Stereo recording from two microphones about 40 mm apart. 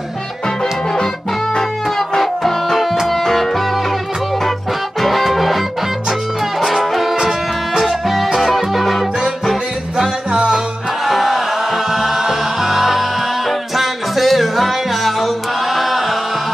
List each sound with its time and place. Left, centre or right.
1.6 s music: centre
5.0 s music: centre
6.6 s music: centre
9.9 s music: centre
11.1 s music: centre